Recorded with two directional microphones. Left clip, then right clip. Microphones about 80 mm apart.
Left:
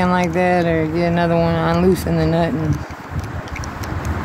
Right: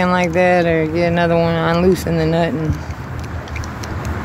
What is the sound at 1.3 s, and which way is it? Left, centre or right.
Speech, left.